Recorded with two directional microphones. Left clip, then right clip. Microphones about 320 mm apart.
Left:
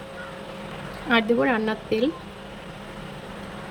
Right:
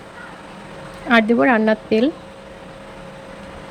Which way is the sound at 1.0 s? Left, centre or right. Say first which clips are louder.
Right 6 dB; centre.